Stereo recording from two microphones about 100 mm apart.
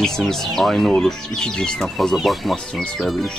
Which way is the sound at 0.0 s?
5° left (ahead or behind).